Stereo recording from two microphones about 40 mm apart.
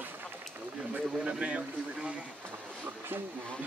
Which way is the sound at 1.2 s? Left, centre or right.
Right.